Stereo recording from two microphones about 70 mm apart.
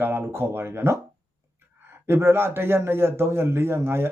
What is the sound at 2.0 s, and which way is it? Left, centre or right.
A man's voice, right.